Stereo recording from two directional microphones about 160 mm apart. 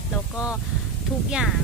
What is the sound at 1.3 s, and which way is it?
Speech, centre (ahead or behind).